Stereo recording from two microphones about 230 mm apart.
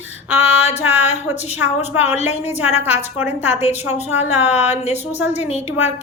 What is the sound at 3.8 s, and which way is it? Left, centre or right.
Speech, centre.